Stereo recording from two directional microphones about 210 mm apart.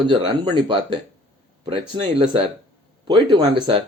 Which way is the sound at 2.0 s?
25° right (ahead or behind).